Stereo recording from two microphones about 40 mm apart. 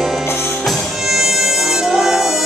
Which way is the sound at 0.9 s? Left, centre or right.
Centre.